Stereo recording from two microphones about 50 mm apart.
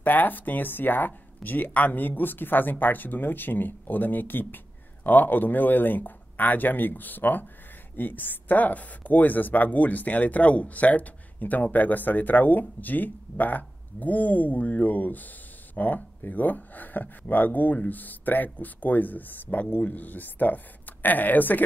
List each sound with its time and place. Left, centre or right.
0.0 s a woman's voice: left